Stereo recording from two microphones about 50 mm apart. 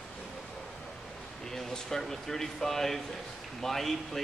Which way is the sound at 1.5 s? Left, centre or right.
Centre.